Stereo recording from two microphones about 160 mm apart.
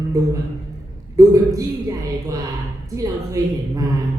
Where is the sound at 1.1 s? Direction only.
20° right (ahead or behind).